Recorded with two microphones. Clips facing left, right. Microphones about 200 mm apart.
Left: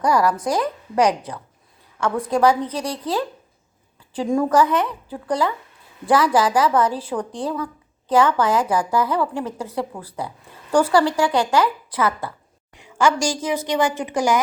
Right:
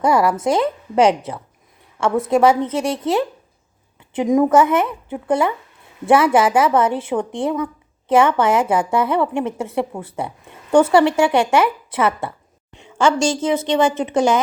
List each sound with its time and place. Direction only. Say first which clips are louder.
0.0 s speech: right 3 dB; 25° right (ahead or behind)